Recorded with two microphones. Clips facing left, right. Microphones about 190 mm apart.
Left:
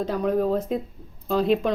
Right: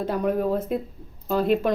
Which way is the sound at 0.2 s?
5° right (ahead or behind).